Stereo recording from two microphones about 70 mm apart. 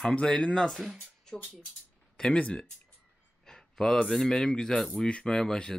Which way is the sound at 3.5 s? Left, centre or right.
Centre.